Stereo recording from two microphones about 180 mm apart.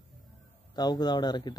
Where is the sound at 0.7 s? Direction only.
25° left (ahead or behind).